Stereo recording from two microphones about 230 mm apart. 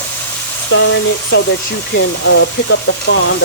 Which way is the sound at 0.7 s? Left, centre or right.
Left.